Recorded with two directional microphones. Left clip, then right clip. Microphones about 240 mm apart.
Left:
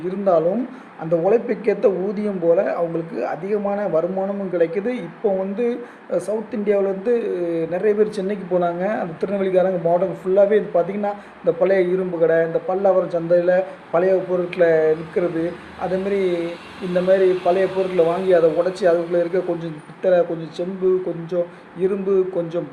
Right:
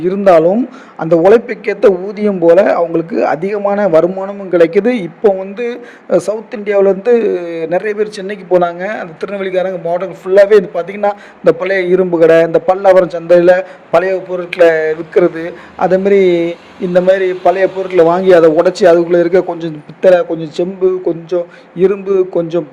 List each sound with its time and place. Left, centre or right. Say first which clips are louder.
0.0 s a man's voice: right 10 dB; right